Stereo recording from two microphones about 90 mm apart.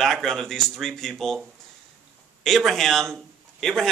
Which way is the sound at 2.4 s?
5° left (ahead or behind).